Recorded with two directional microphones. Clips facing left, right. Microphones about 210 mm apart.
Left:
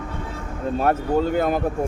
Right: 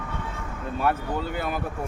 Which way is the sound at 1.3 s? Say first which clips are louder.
Left 9 dB; 45° left (ahead or behind).